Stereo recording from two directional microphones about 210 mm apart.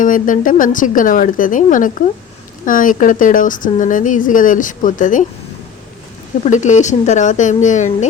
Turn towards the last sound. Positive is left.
turn(degrees=35)  # may be behind; listen again after turning